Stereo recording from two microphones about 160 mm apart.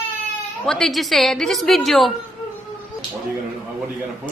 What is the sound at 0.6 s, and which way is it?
A woman's voice, 5° left (ahead or behind).